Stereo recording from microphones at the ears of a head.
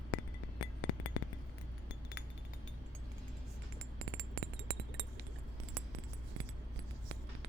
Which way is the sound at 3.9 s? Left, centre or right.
Right.